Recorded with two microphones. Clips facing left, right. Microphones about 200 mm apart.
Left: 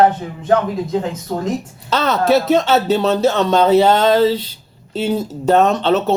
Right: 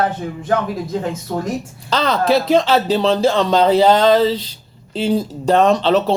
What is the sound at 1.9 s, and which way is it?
Speech, 5° left (ahead or behind).